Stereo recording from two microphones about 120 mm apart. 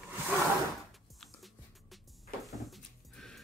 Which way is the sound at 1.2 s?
Centre (ahead or behind).